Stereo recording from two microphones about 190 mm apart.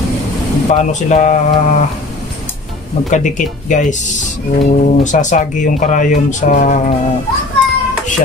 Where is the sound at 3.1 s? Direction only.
40° left (ahead or behind).